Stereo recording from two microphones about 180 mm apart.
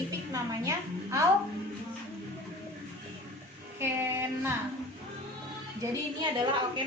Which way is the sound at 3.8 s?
15° right (ahead or behind).